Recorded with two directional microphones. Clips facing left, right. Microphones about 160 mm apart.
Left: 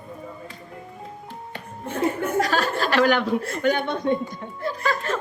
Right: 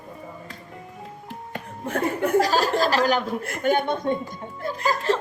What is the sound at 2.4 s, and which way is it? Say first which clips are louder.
Speech: right 2 dB; 35° right (ahead or behind).